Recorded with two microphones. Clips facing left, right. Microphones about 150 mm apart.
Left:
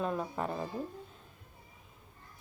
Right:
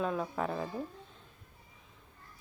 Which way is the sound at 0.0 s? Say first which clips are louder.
Right 1 dB; centre (ahead or behind).